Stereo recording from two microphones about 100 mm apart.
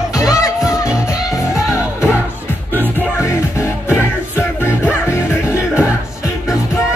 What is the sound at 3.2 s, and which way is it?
Music, 25° left (ahead or behind).